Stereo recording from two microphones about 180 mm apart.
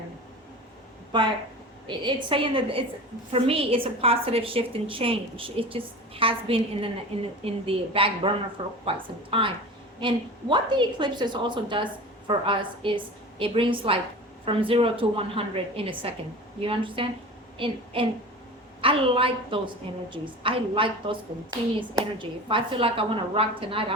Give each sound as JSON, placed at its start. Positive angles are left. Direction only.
{"t": 1.1, "sound": "a woman's voice", "side_deg": -25}
{"t": 18.8, "sound": "a woman's voice", "side_deg": -30}